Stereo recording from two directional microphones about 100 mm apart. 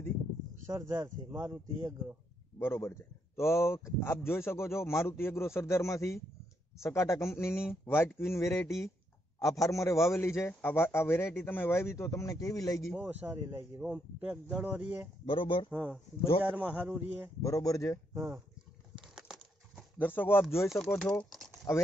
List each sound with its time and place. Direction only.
0.7 s speech: 25° right (ahead or behind)
2.6 s a man's voice: 25° left (ahead or behind)
12.9 s speech: 15° right (ahead or behind)
13.7 s a man's voice: 10° right (ahead or behind)
15.2 s speech: 60° left (ahead or behind)
15.7 s a man's voice: 15° right (ahead or behind)
17.4 s a man's voice: 35° left (ahead or behind)
18.1 s speech: 30° right (ahead or behind)
19.1 s a sound: 5° right (ahead or behind)
20.0 s a man's voice: 20° left (ahead or behind)
21.0 s speech: 5° left (ahead or behind)
21.7 s a man's voice: 30° left (ahead or behind)